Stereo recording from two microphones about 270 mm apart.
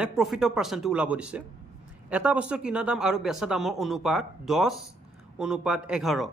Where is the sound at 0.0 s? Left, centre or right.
Centre.